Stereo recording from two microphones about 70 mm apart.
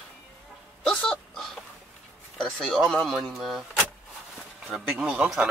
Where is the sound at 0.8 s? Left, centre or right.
Centre.